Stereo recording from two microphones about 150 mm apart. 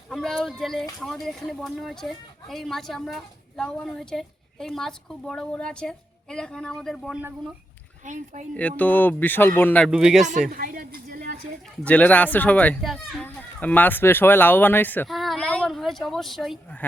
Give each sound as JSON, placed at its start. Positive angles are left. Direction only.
{"t": 0.1, "sound": "speech", "side_deg": 0}
{"t": 8.0, "sound": "speech", "side_deg": -55}
{"t": 8.5, "sound": "speech", "side_deg": 10}
{"t": 9.9, "sound": "speech", "side_deg": -5}
{"t": 10.5, "sound": "a sound", "side_deg": -70}
{"t": 11.8, "sound": "speech", "side_deg": 10}
{"t": 15.0, "sound": "a sound", "side_deg": 0}